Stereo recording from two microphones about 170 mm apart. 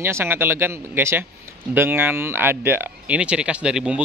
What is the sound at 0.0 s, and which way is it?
A man's voice, 15° right (ahead or behind).